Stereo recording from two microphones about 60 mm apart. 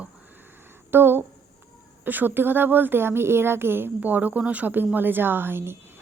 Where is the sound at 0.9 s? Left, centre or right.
Right.